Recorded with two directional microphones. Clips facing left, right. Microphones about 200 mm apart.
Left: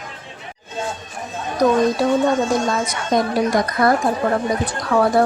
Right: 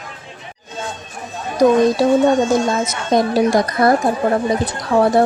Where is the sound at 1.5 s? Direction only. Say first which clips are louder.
Right 4 dB; 25° right (ahead or behind).